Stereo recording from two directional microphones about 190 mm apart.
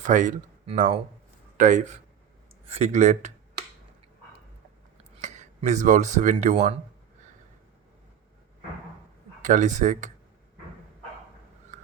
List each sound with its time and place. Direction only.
0.0 s speech: 40° right (ahead or behind)
5.2 s speech: 40° right (ahead or behind)
9.4 s speech: 40° right (ahead or behind)